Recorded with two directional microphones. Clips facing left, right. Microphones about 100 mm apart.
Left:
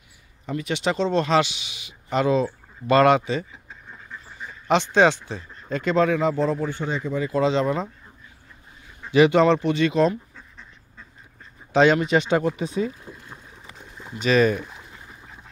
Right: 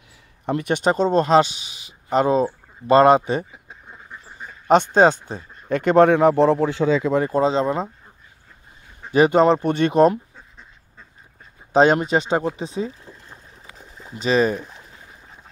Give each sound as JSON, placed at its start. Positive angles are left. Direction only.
{"t": 0.5, "sound": "speech", "side_deg": -55}
{"t": 4.6, "sound": "speech", "side_deg": -45}
{"t": 5.7, "sound": "speech", "side_deg": -60}
{"t": 7.2, "sound": "speech", "side_deg": -35}
{"t": 9.1, "sound": "speech", "side_deg": -40}
{"t": 11.7, "sound": "speech", "side_deg": -40}
{"t": 13.3, "sound": "boat", "side_deg": 0}
{"t": 14.2, "sound": "speech", "side_deg": -30}